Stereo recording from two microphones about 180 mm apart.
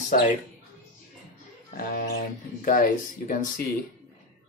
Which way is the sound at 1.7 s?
55° left (ahead or behind).